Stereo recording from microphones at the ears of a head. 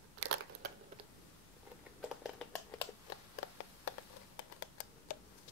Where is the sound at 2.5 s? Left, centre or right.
Left.